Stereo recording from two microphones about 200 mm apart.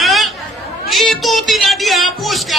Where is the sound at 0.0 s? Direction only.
Centre (ahead or behind).